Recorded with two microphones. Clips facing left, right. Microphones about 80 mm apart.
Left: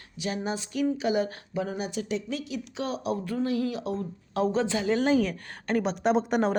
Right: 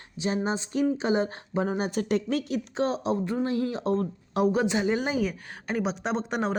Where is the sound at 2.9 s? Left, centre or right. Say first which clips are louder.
Right 3 dB; right.